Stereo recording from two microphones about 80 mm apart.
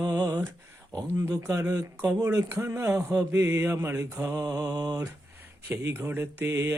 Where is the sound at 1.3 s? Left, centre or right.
Right.